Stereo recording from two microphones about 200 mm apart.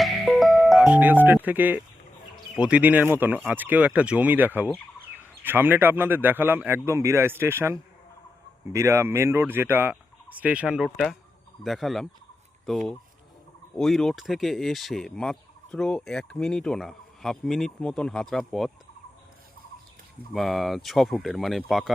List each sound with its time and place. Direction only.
0.0 s music: centre (ahead or behind)
2.3 s speech: 5° right (ahead or behind)
20.3 s speech: centre (ahead or behind)